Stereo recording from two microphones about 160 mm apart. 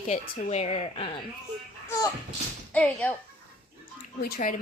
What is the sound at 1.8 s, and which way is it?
Speech, 20° left (ahead or behind).